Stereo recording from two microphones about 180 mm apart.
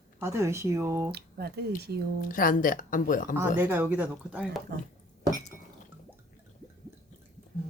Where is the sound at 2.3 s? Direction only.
50° left (ahead or behind).